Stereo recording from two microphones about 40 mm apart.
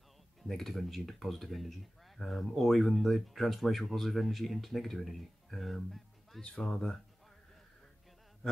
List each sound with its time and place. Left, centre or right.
0.4 s speech: centre
6.7 s speech: centre